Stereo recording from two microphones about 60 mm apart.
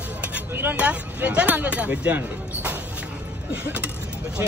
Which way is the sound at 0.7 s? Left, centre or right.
Right.